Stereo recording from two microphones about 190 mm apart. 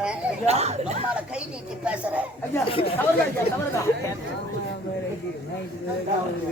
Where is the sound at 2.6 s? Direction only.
30° left (ahead or behind).